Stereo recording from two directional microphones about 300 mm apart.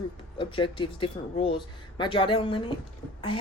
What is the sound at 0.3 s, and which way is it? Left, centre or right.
A woman's voice, centre.